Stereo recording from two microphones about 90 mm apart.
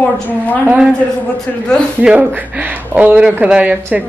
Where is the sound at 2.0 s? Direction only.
15° right (ahead or behind).